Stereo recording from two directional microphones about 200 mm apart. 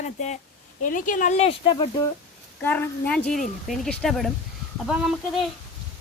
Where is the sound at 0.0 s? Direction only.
35° left (ahead or behind).